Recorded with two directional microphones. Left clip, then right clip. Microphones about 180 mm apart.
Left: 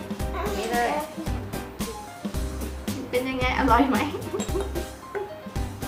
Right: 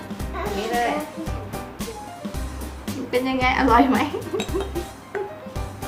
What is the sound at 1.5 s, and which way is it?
Music, centre (ahead or behind).